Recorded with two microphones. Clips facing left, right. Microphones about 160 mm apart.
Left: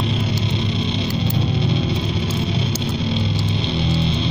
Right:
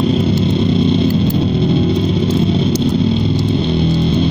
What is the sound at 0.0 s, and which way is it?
Music, 50° right (ahead or behind).